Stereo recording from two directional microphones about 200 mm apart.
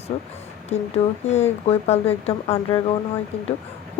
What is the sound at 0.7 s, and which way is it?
Speech, 35° left (ahead or behind).